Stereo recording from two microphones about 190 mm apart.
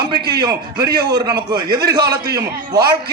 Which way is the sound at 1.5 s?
55° right (ahead or behind).